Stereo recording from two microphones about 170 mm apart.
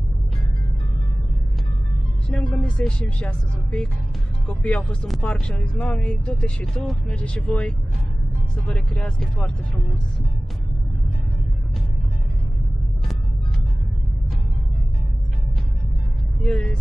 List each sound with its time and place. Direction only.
2.3 s speech: 5° left (ahead or behind)
16.4 s speech: 5° left (ahead or behind)